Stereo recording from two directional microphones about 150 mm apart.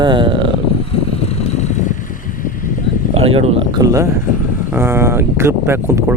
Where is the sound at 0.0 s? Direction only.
30° right (ahead or behind).